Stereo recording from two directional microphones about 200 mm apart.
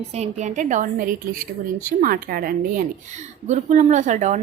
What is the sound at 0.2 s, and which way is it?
A woman's voice, 35° right (ahead or behind).